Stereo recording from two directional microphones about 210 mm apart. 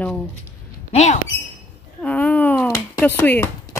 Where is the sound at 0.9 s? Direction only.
35° left (ahead or behind).